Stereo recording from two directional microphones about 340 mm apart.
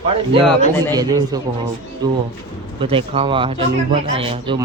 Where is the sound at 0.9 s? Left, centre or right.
Centre.